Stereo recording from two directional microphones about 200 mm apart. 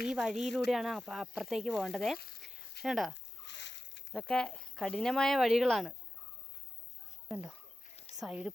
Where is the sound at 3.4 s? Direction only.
60° left (ahead or behind).